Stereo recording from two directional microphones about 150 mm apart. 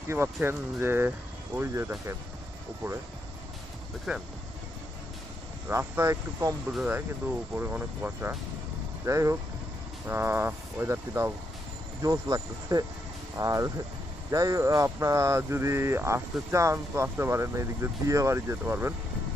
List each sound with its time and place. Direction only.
0.1 s speech: 15° right (ahead or behind)
4.1 s speech: 5° right (ahead or behind)
5.7 s speech: 20° right (ahead or behind)